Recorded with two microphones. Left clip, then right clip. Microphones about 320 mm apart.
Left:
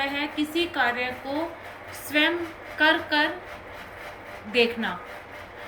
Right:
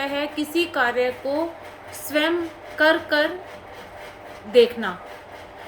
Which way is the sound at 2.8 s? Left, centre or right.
Right.